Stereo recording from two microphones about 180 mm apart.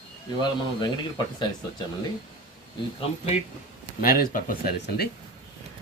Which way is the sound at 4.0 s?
55° left (ahead or behind).